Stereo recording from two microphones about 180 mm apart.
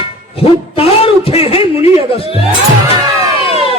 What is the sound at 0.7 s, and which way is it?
A man's voice, 30° left (ahead or behind).